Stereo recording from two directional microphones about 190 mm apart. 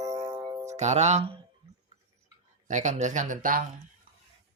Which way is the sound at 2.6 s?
40° right (ahead or behind).